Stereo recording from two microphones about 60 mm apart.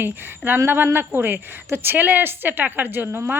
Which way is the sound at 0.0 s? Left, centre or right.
Right.